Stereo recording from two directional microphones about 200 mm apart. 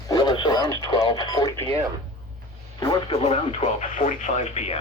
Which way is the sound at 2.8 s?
20° left (ahead or behind).